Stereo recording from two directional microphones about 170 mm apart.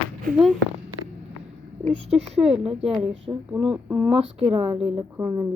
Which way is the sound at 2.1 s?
35° right (ahead or behind).